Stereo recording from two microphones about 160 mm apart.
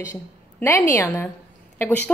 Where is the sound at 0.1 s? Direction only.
15° left (ahead or behind).